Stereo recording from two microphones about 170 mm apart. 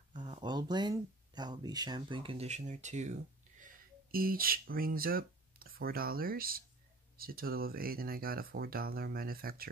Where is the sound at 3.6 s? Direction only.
60° right (ahead or behind).